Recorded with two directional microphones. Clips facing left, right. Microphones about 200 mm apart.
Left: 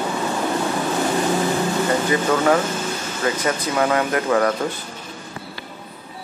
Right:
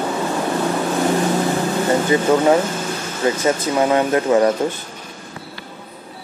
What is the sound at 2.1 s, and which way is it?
Speech, 20° right (ahead or behind).